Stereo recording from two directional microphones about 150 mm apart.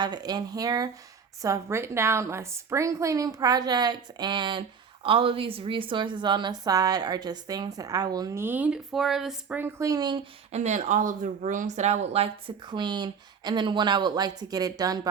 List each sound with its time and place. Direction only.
0.0 s a woman's voice: 30° right (ahead or behind); by 9.6 s centre (ahead or behind)
9.6 s a woman's voice: 15° right (ahead or behind)
10.5 s speech: 50° right (ahead or behind); by 15.0 s 25° right (ahead or behind)